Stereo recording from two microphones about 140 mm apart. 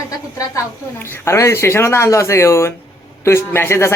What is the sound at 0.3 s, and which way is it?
A woman's voice, 20° left (ahead or behind).